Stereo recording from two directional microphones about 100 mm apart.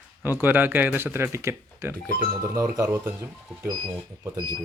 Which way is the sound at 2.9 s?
25° right (ahead or behind).